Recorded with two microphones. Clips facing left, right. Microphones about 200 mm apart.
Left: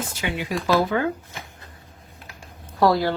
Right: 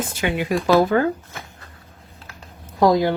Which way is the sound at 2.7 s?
15° right (ahead or behind).